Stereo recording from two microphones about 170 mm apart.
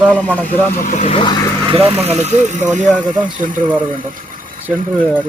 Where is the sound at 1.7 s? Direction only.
35° right (ahead or behind); by 3.6 s 50° right (ahead or behind).